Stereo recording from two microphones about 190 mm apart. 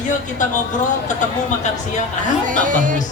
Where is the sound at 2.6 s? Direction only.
45° right (ahead or behind).